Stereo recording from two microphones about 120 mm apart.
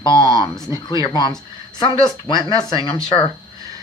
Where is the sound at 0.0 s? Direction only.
40° left (ahead or behind).